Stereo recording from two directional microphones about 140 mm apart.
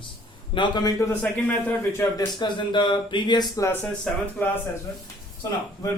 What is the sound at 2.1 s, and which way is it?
Speech, 35° left (ahead or behind).